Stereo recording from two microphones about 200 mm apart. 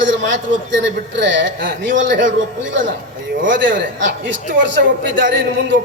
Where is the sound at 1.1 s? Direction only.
65° right (ahead or behind).